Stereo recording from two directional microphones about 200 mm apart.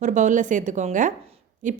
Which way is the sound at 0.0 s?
40° right (ahead or behind).